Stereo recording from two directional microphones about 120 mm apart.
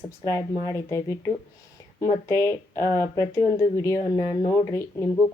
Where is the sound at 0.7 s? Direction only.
25° left (ahead or behind).